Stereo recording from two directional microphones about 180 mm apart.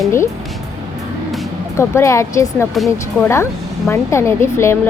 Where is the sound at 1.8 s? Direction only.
15° left (ahead or behind).